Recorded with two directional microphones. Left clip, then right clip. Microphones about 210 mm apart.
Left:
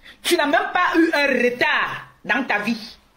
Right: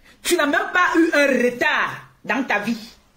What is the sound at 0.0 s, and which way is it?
Speech, 15° right (ahead or behind).